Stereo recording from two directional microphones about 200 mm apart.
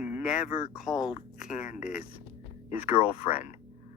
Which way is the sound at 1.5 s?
35° left (ahead or behind).